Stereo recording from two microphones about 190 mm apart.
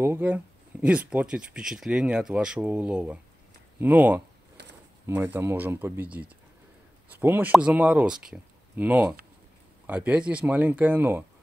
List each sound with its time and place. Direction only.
0.0 s speech: 10° right (ahead or behind)
4.6 s a sound: 65° right (ahead or behind)
5.0 s speech: 15° right (ahead or behind)